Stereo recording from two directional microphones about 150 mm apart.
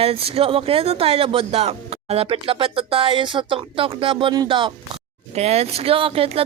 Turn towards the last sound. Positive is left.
turn(degrees=-40)  # may be behind; listen again after turning